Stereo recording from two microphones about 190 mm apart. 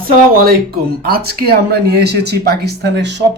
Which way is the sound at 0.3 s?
50° right (ahead or behind).